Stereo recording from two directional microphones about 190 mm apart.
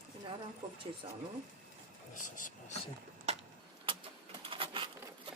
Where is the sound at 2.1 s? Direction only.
45° left (ahead or behind).